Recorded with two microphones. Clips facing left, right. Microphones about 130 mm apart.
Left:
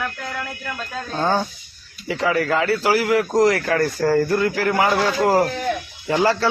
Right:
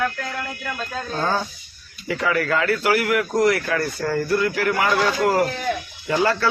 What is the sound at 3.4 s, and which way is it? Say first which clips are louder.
Speech: left 2 dB; 40° left (ahead or behind).